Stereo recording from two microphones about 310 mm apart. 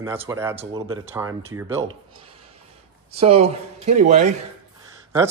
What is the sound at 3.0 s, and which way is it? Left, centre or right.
Speech, centre.